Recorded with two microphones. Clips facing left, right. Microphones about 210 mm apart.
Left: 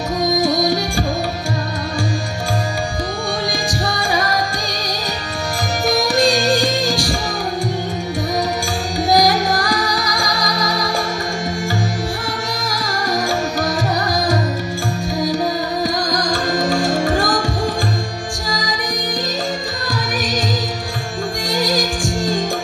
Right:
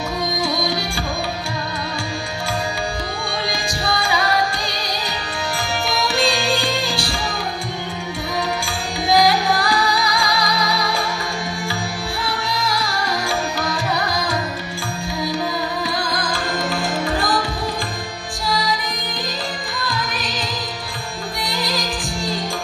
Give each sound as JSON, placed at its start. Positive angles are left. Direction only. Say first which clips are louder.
{"t": 0.2, "sound": "music", "louder": "left 7 dB", "side_deg": 45}
{"t": 3.8, "sound": "music", "louder": "right 1 dB", "side_deg": 45}
{"t": 5.9, "sound": "music", "louder": "left 6 dB", "side_deg": 45}
{"t": 9.1, "sound": "music", "louder": "left 1 dB", "side_deg": 45}
{"t": 12.5, "sound": "music", "louder": "even", "side_deg": 45}
{"t": 15.8, "sound": "music", "louder": "left 4 dB", "side_deg": 40}
{"t": 18.5, "sound": "music", "louder": "right 3 dB", "side_deg": 45}
{"t": 21.4, "sound": "music", "louder": "left 6 dB", "side_deg": 45}